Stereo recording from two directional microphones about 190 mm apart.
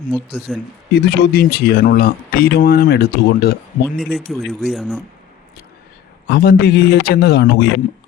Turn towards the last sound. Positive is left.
turn(degrees=60)  # may be behind; listen again after turning